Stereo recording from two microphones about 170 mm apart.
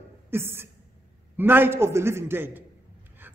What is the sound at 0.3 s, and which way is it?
A man's voice, 15° right (ahead or behind).